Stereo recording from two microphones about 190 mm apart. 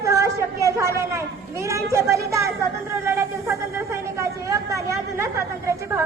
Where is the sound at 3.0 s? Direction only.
15° right (ahead or behind).